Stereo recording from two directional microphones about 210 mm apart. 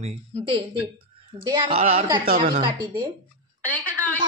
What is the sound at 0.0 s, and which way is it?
A woman's voice, 25° right (ahead or behind).